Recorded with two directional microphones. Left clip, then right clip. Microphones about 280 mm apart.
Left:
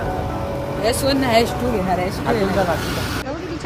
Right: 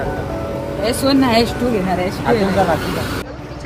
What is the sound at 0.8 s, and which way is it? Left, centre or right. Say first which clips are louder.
Speech: right 3 dB; centre.